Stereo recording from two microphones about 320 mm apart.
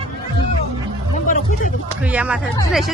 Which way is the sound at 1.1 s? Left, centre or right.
Left.